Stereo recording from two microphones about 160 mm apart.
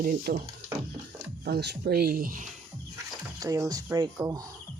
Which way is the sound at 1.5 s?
90° right.